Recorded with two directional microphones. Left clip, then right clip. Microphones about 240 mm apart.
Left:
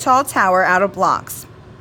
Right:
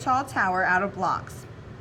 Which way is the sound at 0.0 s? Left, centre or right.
Left.